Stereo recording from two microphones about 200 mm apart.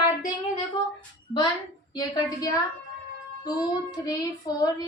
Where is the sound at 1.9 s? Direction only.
20° left (ahead or behind).